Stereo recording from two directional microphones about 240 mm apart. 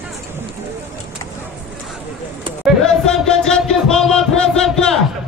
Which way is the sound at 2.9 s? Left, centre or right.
Centre.